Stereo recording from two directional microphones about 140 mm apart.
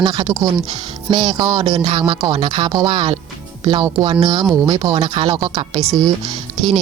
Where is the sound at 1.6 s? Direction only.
45° right (ahead or behind).